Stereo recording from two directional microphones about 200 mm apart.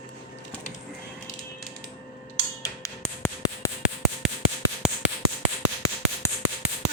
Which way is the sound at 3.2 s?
10° left (ahead or behind).